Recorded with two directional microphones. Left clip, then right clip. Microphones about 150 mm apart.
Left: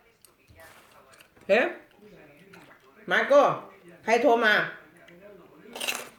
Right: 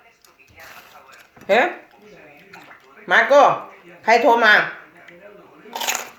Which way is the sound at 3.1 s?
20° left (ahead or behind).